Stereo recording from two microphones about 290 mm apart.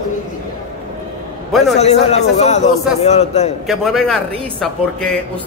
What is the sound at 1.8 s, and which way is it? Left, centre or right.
A man's voice, left.